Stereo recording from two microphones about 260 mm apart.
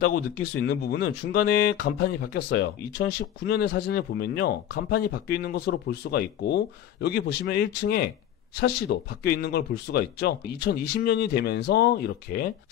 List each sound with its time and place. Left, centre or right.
0.0 s speech: left